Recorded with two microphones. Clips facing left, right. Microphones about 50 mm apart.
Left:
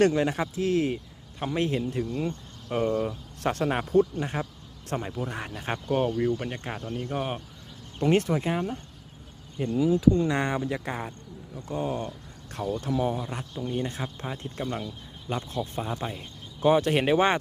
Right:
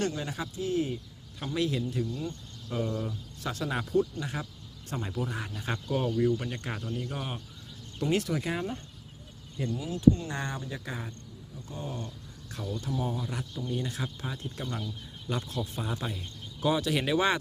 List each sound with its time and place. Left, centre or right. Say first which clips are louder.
0.0 s speech: left 10 dB; left
0.5 s speech: left 5 dB; left
1.5 s speech: left 3 dB; left
5.0 s speech: left 1 dB; centre
5.3 s speech: left 3 dB; left
10.2 s speech: left 9 dB; left
10.8 s speech: left 6 dB; left
11.5 s speech: left 9 dB; left
12.5 s speech: left 6 dB; left
12.9 s speech: left 6 dB; left
13.1 s speech: left 2 dB; left
15.9 s speech: left 3 dB; centre
16.6 s speech: left 6 dB; left